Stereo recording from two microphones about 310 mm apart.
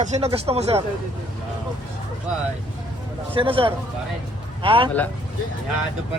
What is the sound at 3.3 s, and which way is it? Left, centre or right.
Speech, centre.